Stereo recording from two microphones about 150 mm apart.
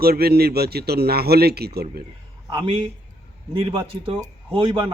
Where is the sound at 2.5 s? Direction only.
35° right (ahead or behind).